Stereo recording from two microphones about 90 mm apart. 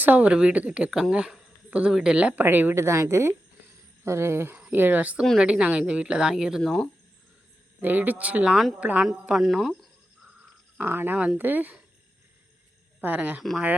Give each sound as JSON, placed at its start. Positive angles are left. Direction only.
{"t": 0.0, "sound": "speech", "side_deg": -20}
{"t": 6.6, "sound": "speech", "side_deg": 10}
{"t": 7.8, "sound": "a woman's voice", "side_deg": -20}
{"t": 10.8, "sound": "speech", "side_deg": -25}
{"t": 13.0, "sound": "speech", "side_deg": -20}